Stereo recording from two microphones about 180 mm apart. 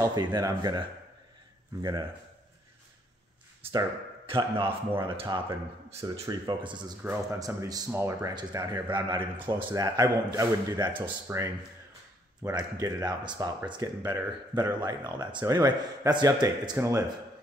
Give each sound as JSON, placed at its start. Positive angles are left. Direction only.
{"t": 0.0, "sound": "speech", "side_deg": -25}
{"t": 4.3, "sound": "speech", "side_deg": -30}
{"t": 7.0, "sound": "speech", "side_deg": -10}